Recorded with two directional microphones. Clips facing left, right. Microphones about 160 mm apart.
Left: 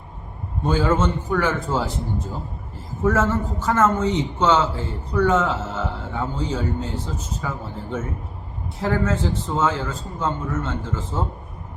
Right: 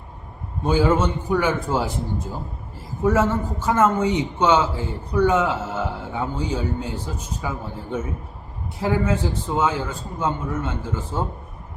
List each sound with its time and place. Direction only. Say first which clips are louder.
0.6 s a man's voice: right 1 dB; 10° right (ahead or behind)